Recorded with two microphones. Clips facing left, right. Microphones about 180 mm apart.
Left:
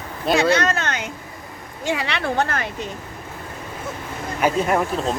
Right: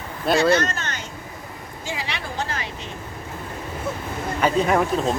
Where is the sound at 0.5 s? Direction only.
65° left (ahead or behind).